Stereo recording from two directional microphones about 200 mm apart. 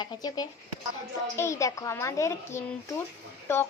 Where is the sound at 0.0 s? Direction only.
20° left (ahead or behind).